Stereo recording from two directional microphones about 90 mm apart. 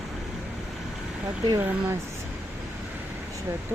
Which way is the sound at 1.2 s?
40° right (ahead or behind).